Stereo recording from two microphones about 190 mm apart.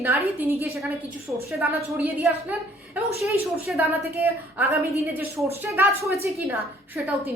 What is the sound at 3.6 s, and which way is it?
A woman's voice, 10° right (ahead or behind).